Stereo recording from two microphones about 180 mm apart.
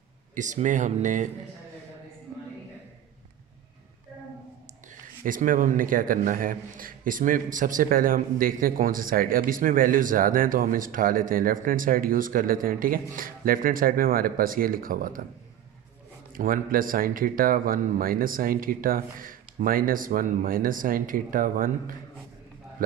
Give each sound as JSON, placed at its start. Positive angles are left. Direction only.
{"t": 0.3, "sound": "a man's voice", "side_deg": -45}
{"t": 5.2, "sound": "a man's voice", "side_deg": -50}
{"t": 16.3, "sound": "a man's voice", "side_deg": -50}